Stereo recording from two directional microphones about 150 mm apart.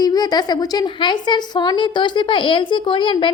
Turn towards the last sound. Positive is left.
turn(degrees=35)  # may be behind; listen again after turning